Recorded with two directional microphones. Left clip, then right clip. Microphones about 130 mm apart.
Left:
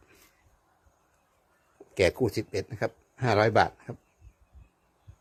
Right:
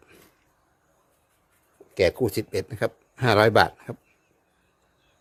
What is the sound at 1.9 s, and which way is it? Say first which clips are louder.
Speech: right 3 dB; centre (ahead or behind).